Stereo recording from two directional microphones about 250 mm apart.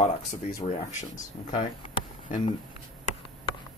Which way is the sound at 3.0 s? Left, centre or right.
Left.